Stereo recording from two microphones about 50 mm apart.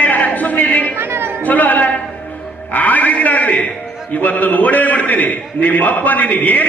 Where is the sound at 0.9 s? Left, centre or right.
Right.